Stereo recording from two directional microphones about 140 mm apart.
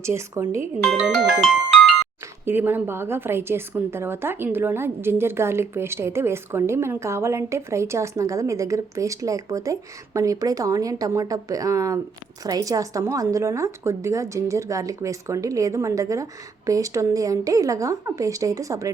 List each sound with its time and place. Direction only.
0.0 s a woman's voice: 20° right (ahead or behind)
0.8 s speech: 5° left (ahead or behind)
2.5 s a woman's voice: 15° right (ahead or behind)